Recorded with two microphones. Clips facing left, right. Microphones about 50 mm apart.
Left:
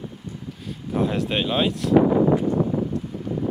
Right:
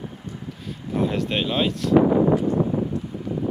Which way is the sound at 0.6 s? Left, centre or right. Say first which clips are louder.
Even; centre.